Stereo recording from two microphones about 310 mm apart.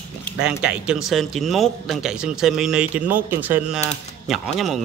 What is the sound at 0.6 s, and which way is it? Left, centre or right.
A man's voice, centre.